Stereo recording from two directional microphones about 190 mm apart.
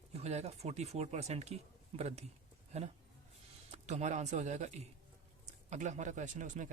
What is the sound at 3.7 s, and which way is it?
Speech, 35° right (ahead or behind).